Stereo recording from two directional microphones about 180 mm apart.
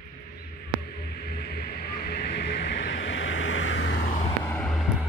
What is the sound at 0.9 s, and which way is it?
Music, 65° left (ahead or behind).